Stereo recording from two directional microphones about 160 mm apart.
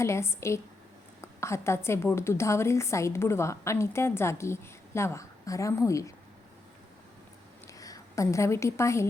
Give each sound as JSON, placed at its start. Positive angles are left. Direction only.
{"t": 0.0, "sound": "a woman's voice", "side_deg": 15}
{"t": 7.7, "sound": "a woman's voice", "side_deg": 20}